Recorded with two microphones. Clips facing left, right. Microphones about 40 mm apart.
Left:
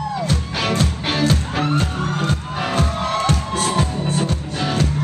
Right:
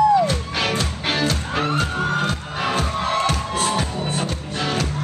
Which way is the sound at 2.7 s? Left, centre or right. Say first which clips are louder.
Left 1 dB; centre.